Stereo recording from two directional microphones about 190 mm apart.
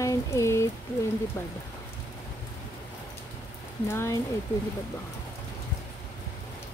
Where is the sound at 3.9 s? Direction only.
15° left (ahead or behind).